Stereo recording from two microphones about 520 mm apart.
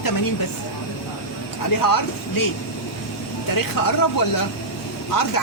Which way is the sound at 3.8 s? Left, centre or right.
Left.